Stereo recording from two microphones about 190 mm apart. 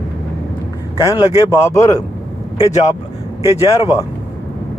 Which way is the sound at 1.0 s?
20° left (ahead or behind).